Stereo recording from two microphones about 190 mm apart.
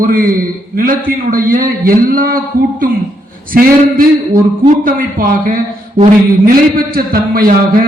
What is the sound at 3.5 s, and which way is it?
A man's voice, 50° right (ahead or behind).